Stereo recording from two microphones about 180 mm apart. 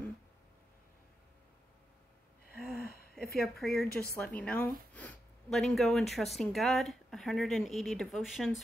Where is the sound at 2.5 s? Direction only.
55° left (ahead or behind).